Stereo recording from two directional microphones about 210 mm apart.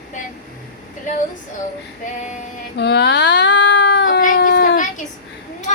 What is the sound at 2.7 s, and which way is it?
Child singing, 50° left (ahead or behind).